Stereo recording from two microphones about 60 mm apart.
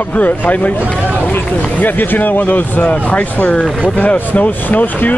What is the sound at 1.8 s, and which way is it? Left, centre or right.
Speech, left.